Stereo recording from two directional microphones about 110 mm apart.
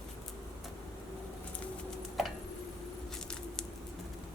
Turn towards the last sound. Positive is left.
turn(degrees=5)  # may be behind; listen again after turning